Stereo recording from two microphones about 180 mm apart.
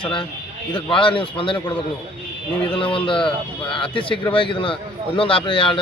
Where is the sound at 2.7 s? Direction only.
30° left (ahead or behind).